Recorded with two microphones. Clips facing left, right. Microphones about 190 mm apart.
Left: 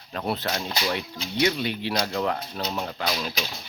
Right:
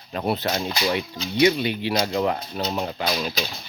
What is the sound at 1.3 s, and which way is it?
Speech, 5° right (ahead or behind).